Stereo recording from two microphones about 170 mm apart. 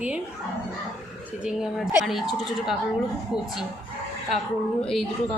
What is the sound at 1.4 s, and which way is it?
Speech, 5° right (ahead or behind).